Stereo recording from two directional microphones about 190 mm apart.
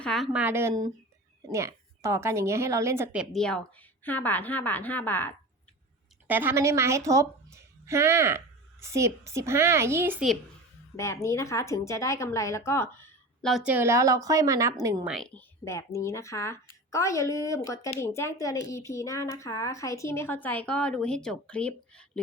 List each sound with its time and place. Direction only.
0.0 s a woman's voice: centre (ahead or behind)
6.2 s a woman's voice: 10° right (ahead or behind)
10.9 s a woman's voice: 15° left (ahead or behind)
13.5 s speech: 10° right (ahead or behind)
15.0 s a woman's voice: centre (ahead or behind)